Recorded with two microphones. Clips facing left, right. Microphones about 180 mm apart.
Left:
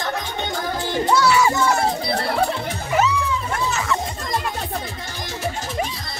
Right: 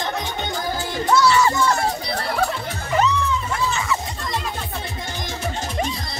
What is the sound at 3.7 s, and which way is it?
Music, centre (ahead or behind).